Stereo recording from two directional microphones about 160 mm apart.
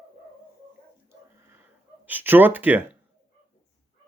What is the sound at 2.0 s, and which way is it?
Speech, 10° right (ahead or behind).